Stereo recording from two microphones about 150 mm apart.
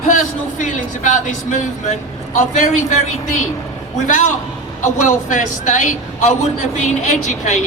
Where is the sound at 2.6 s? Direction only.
55° left (ahead or behind).